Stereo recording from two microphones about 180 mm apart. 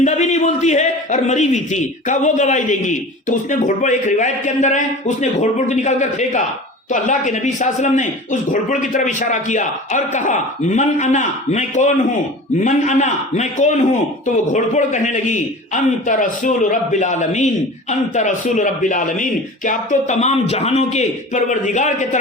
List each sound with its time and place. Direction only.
0.0 s a man's voice: 40° left (ahead or behind)